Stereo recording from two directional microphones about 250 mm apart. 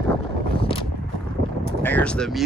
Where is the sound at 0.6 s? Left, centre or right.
Left.